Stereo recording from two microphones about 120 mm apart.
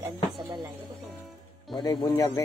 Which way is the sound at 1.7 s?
35° left (ahead or behind).